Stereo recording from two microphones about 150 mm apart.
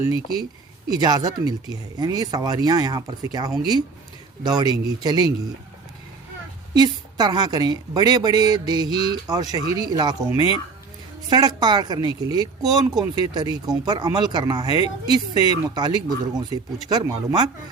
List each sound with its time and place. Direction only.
0.9 s speech: 25° right (ahead or behind)
6.7 s speech: 25° right (ahead or behind)
10.3 s speech: 35° left (ahead or behind)
11.3 s speech: 25° right (ahead or behind)